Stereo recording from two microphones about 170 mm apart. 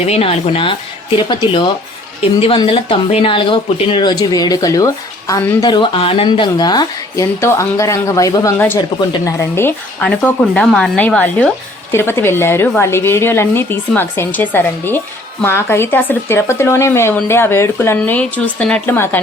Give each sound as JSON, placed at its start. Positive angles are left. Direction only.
{"t": 0.0, "sound": "speech", "side_deg": 35}